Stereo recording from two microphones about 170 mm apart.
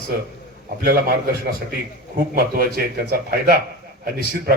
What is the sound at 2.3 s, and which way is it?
Speech, 60° right (ahead or behind).